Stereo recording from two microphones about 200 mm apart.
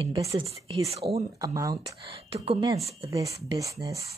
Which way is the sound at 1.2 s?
15° right (ahead or behind).